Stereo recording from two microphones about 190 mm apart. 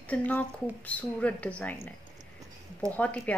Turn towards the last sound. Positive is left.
turn(degrees=10)  # may be behind; listen again after turning